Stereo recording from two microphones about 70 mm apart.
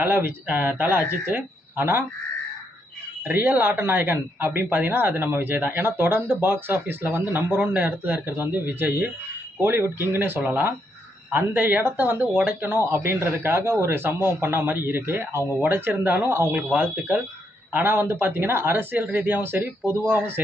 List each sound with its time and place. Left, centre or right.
0.0 s speech: right
3.3 s speech: right